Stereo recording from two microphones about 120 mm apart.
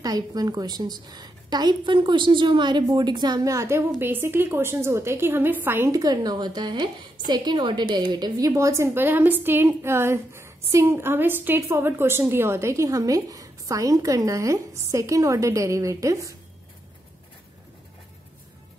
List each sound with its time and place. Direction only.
0.0 s a woman's voice: 30° right (ahead or behind)
5.9 s a woman's voice: 35° right (ahead or behind)